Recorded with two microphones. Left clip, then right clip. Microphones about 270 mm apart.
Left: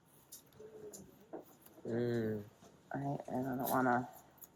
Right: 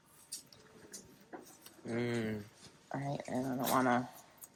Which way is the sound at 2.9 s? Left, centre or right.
Right.